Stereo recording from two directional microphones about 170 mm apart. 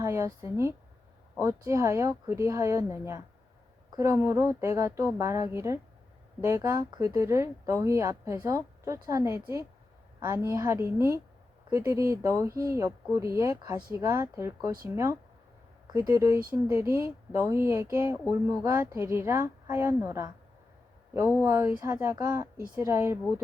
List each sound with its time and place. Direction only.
0.0 s speech: 15° right (ahead or behind)